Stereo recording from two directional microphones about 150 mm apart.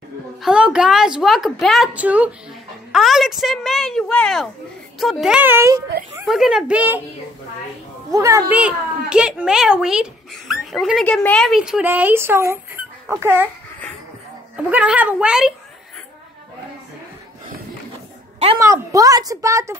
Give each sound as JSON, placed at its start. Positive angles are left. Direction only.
{"t": 0.4, "sound": "a child's voice", "side_deg": -5}
{"t": 6.2, "sound": "speech", "side_deg": 0}
{"t": 8.1, "sound": "a child's voice", "side_deg": -20}
{"t": 14.7, "sound": "a child's voice", "side_deg": -10}
{"t": 18.6, "sound": "a woman's voice", "side_deg": -20}